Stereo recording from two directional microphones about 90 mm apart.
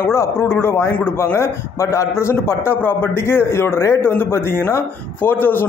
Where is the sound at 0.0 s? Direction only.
30° left (ahead or behind).